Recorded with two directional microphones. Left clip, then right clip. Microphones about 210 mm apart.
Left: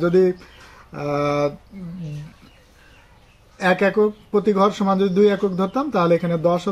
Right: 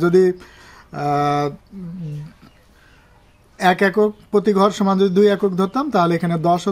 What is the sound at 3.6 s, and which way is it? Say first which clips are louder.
Speech: right 2 dB; 40° right (ahead or behind).